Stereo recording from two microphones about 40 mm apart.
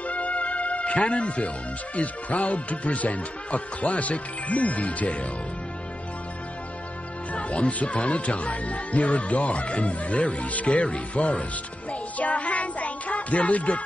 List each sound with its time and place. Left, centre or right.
0.0 s music: left
2.0 s speech: left
7.3 s speech: left
11.9 s music: left